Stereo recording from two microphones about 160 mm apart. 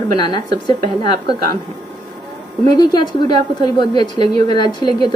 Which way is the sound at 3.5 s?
25° left (ahead or behind).